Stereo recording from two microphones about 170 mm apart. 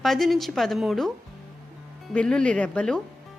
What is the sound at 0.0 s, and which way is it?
A woman's voice, centre (ahead or behind).